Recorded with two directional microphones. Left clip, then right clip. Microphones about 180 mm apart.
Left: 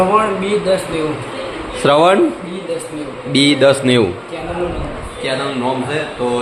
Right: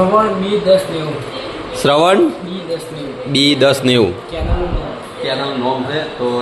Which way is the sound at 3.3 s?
10° right (ahead or behind).